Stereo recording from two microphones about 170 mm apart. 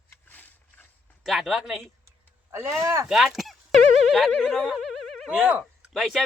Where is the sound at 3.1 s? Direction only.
Centre (ahead or behind).